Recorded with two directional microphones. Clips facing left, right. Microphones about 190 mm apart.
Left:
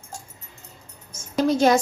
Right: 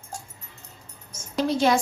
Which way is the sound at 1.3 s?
45° left (ahead or behind).